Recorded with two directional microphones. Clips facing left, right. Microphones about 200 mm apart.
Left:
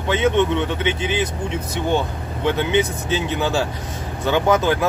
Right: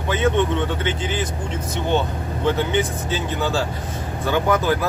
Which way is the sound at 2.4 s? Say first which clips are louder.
Left 2 dB; 20° left (ahead or behind).